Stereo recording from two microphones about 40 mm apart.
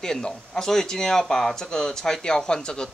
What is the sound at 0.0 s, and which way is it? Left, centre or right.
Speech, centre.